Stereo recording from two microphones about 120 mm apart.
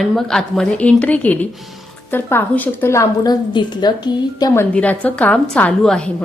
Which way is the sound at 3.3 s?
35° left (ahead or behind).